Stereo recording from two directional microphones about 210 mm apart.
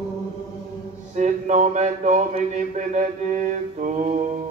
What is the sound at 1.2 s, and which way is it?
Speech, 35° right (ahead or behind).